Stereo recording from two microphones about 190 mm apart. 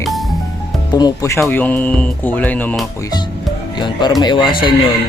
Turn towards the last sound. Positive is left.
turn(degrees=25)  # may be behind; listen again after turning